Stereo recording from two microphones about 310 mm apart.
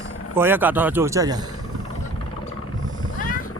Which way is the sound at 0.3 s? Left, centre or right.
Centre.